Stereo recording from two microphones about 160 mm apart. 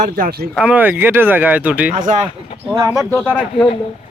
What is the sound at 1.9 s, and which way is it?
Speech, 50° right (ahead or behind).